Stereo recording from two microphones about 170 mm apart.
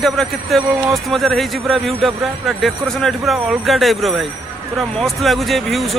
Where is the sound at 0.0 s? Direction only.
Centre (ahead or behind).